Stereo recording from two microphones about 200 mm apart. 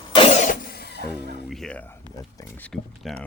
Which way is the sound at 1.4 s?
Centre (ahead or behind).